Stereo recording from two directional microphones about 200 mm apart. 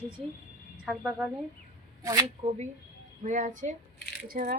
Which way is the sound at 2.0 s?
15° right (ahead or behind).